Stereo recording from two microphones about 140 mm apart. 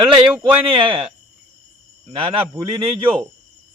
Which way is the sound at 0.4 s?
35° right (ahead or behind).